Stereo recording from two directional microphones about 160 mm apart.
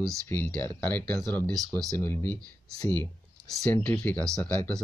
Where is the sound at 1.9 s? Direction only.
15° left (ahead or behind).